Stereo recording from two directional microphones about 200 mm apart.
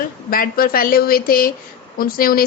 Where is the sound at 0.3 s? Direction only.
45° left (ahead or behind).